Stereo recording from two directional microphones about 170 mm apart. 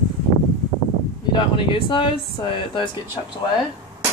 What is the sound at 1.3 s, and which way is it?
Speech, 30° left (ahead or behind).